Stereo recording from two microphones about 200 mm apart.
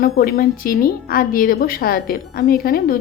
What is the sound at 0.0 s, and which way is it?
A woman's voice, 50° left (ahead or behind).